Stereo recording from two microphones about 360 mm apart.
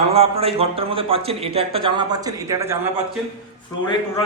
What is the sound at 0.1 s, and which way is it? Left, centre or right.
A man's voice, centre.